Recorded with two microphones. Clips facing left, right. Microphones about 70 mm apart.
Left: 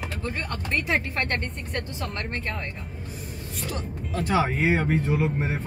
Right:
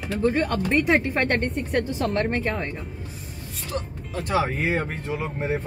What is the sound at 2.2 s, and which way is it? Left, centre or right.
Speech, right.